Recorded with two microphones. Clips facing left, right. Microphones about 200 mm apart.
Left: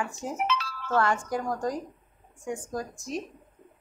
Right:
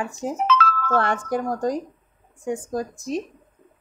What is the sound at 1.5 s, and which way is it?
Speech, 35° right (ahead or behind).